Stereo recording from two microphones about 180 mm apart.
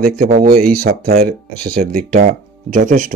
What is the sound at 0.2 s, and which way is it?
Speech, 55° right (ahead or behind).